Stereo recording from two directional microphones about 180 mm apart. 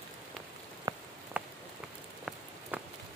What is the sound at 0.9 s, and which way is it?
Rain on surface, 20° right (ahead or behind).